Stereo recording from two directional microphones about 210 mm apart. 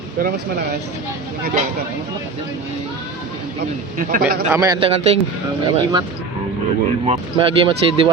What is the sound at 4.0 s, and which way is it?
Speech, 40° right (ahead or behind).